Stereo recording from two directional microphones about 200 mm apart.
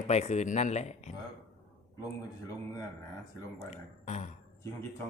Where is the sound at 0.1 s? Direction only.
35° left (ahead or behind).